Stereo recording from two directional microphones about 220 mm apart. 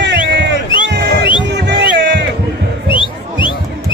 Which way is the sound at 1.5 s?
50° right (ahead or behind).